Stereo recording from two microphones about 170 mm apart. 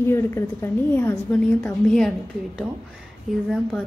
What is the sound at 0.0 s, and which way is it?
A woman's voice, 15° left (ahead or behind).